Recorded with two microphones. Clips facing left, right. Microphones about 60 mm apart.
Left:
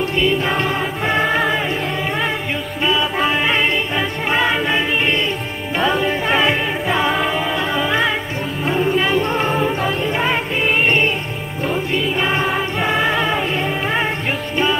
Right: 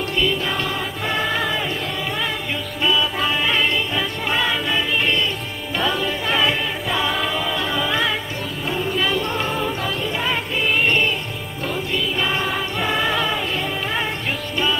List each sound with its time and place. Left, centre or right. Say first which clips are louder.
0.0 s music: left 4 dB; left
2.8 s music: left 2 dB; left